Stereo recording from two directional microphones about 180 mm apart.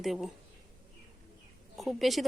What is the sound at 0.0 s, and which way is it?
Speech, centre (ahead or behind).